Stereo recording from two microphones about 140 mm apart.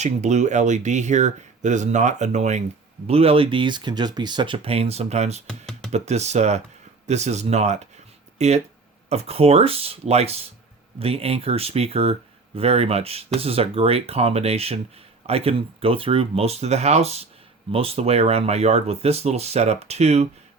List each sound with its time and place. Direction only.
0.0 s speech: 55° right (ahead or behind)
3.1 s speech: 45° right (ahead or behind)
5.5 s computer keyboard: 5° left (ahead or behind)
5.9 s speech: 50° right (ahead or behind)